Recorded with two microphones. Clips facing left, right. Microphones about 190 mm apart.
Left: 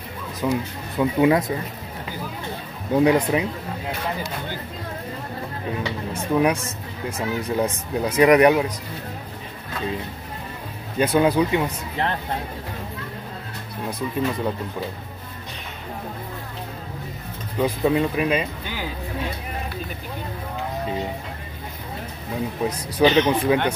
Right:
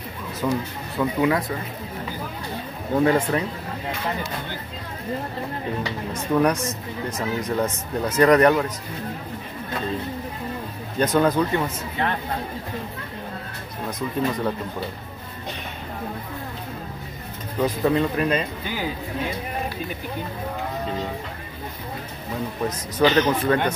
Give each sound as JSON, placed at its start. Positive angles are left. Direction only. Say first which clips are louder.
{"t": 0.4, "sound": "speech", "louder": "left 1 dB", "side_deg": 15}
{"t": 3.0, "sound": "speech", "louder": "left 2 dB", "side_deg": 15}
{"t": 6.1, "sound": "speech", "louder": "even", "side_deg": 10}
{"t": 11.0, "sound": "speech", "louder": "left 1 dB", "side_deg": 10}
{"t": 13.8, "sound": "speech", "louder": "even", "side_deg": 10}
{"t": 17.6, "sound": "speech", "louder": "left 1 dB", "side_deg": 10}
{"t": 22.7, "sound": "speech", "louder": "left 1 dB", "side_deg": 15}